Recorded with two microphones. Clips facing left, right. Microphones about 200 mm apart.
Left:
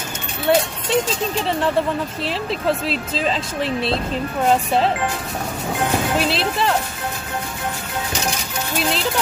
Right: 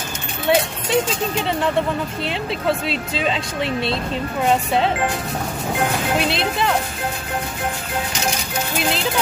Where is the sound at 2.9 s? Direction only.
Centre (ahead or behind).